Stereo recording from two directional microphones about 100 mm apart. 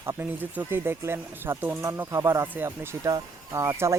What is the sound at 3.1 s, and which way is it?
Speech, 35° right (ahead or behind).